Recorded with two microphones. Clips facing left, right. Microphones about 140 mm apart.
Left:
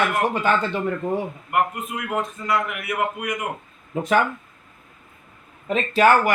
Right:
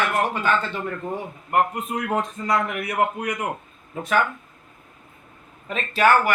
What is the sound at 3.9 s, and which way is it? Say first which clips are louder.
Speech: left 4 dB; 20° left (ahead or behind).